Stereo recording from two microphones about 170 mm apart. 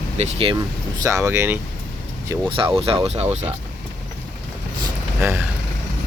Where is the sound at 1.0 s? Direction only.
15° right (ahead or behind).